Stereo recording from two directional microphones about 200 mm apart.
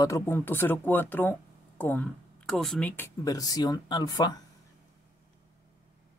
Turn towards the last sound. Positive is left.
turn(degrees=20)  # may be behind; listen again after turning